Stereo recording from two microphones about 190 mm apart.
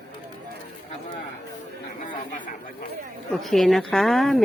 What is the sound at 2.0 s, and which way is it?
Speech, 45° left (ahead or behind).